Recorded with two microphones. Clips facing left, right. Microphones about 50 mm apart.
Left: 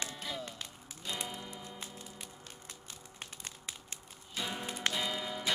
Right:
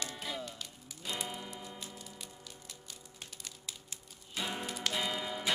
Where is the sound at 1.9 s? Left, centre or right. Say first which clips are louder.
Left 1 dB; left.